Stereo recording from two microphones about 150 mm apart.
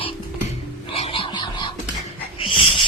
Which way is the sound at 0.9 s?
40° left (ahead or behind).